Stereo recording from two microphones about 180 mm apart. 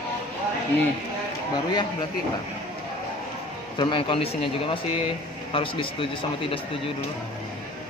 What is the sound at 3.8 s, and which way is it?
Speech, 25° left (ahead or behind).